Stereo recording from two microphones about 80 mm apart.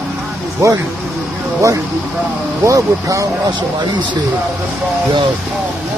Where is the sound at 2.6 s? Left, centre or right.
Right.